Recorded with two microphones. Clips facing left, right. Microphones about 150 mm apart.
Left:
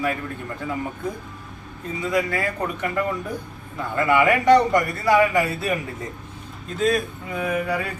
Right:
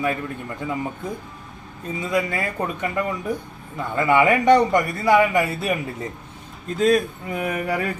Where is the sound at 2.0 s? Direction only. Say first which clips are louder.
Left 1 dB; 20° right (ahead or behind).